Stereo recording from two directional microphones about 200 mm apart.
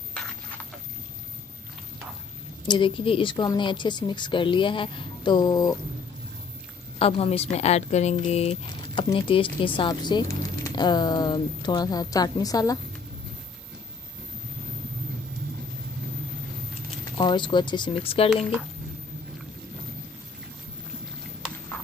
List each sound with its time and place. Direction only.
2.6 s speech: 25° left (ahead or behind)
7.0 s speech: 30° left (ahead or behind)
17.2 s speech: 20° left (ahead or behind)